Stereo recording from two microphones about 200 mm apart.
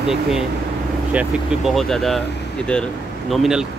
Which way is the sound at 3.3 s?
Centre (ahead or behind).